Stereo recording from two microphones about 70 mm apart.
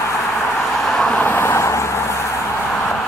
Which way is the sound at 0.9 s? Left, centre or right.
Centre.